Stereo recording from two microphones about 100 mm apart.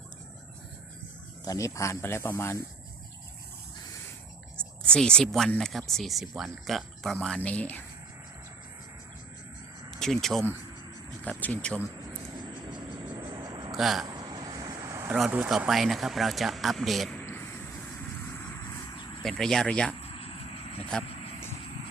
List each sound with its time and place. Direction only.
1.5 s speech: 30° left (ahead or behind)
4.9 s speech: 10° left (ahead or behind)
7.3 s speech: 15° left (ahead or behind)
10.0 s speech: 5° left (ahead or behind)
11.2 s speech: 15° left (ahead or behind)
12.4 s a sound: 45° right (ahead or behind)
13.7 s speech: centre (ahead or behind)
14.0 s vehicle: 40° right (ahead or behind)
14.8 s vehicle: 30° right (ahead or behind)
15.4 s speech: 5° right (ahead or behind)
19.2 s speech: 5° left (ahead or behind)
20.0 s vehicle: 75° left (ahead or behind)